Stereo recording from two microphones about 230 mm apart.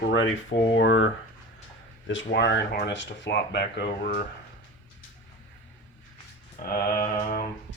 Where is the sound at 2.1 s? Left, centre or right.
Left.